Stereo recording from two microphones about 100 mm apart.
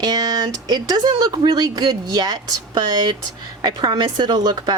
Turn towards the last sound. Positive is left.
turn(degrees=-45)  # may be behind; listen again after turning